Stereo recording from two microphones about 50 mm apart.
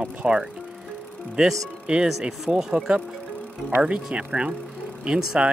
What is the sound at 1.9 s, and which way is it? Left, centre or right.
Speech, right.